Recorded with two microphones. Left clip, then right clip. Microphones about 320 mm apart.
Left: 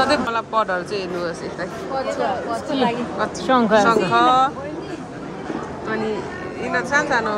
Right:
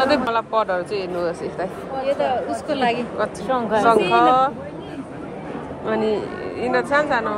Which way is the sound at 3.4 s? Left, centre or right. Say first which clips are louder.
Left 6 dB; left.